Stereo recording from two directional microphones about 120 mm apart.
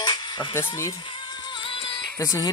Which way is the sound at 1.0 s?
40° left (ahead or behind).